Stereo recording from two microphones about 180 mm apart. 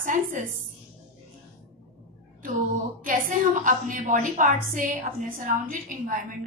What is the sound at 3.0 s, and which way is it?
A woman's voice, 50° right (ahead or behind).